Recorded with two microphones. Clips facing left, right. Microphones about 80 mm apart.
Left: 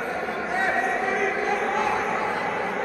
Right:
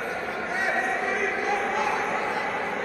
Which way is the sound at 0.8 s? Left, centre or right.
Centre.